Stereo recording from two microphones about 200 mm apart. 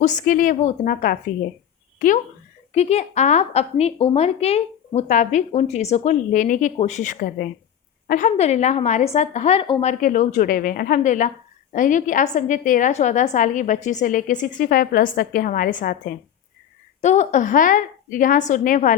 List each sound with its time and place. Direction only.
0.0 s a woman's voice: 40° left (ahead or behind)
10.0 s a woman's voice: 40° left (ahead or behind)